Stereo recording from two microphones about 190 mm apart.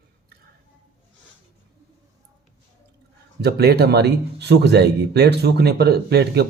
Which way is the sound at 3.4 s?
60° right (ahead or behind).